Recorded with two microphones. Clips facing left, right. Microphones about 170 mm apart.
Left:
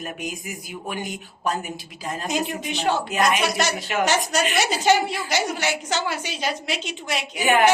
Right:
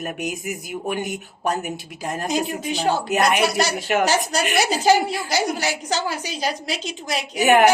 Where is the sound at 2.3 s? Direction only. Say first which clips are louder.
Right 2 dB; 35° right (ahead or behind).